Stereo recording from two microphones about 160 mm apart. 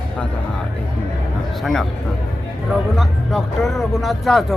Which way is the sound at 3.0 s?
Centre (ahead or behind).